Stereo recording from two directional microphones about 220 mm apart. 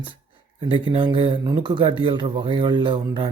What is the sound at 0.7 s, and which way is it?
A man's voice, 25° right (ahead or behind).